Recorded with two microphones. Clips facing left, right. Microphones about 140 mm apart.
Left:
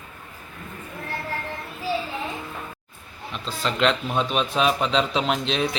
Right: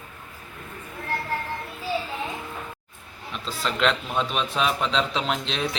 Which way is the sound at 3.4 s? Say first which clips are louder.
Left 2 dB; centre (ahead or behind).